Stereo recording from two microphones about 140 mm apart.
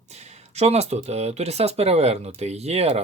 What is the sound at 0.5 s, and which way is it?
Speech, 50° right (ahead or behind).